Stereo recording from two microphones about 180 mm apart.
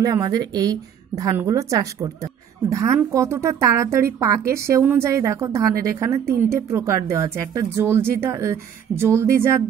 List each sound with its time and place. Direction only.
0.0 s a woman's voice: 20° right (ahead or behind)